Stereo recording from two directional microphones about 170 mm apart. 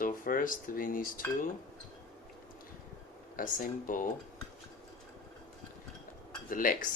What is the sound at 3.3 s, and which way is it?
Speech, 50° left (ahead or behind).